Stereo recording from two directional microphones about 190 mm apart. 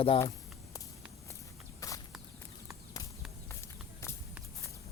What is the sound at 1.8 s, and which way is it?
Walk, 15° left (ahead or behind).